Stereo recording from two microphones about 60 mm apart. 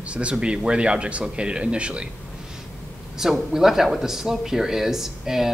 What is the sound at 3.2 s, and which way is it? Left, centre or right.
Speech, centre.